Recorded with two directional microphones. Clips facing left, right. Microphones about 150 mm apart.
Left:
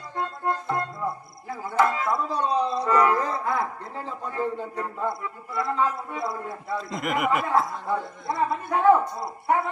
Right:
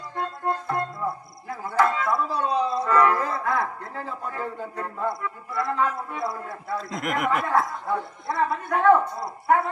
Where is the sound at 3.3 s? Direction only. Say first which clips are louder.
Right 1 dB; 25° left (ahead or behind).